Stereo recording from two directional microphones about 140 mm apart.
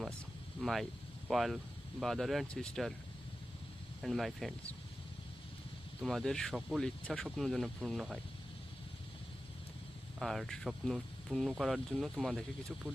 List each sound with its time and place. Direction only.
0.6 s speech: centre (ahead or behind)
4.0 s speech: centre (ahead or behind)
6.0 s speech: 5° left (ahead or behind)
10.2 s speech: centre (ahead or behind)